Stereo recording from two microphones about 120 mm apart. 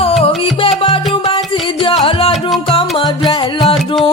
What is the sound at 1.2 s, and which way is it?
Music, 45° left (ahead or behind).